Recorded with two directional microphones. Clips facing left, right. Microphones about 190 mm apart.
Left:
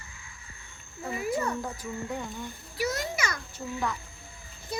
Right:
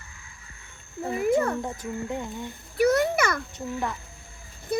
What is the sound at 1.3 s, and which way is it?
Speech, 50° right (ahead or behind).